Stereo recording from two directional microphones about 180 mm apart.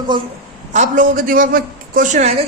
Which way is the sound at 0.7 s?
45° right (ahead or behind).